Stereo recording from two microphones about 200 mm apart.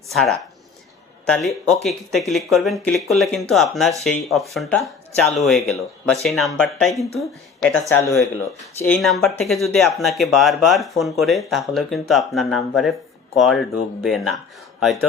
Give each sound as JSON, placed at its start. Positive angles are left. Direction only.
{"t": 0.1, "sound": "speech", "side_deg": 0}
{"t": 8.0, "sound": "speech", "side_deg": 15}
{"t": 8.8, "sound": "speech", "side_deg": 5}